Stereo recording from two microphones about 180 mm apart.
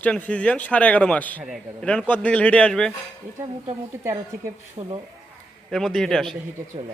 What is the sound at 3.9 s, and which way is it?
Speech, 10° right (ahead or behind).